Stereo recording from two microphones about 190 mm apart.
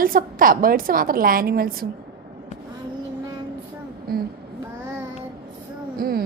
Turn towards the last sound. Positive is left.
turn(degrees=-50)  # may be behind; listen again after turning